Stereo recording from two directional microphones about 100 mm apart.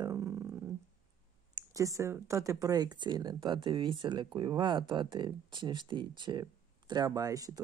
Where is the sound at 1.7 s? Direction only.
35° right (ahead or behind).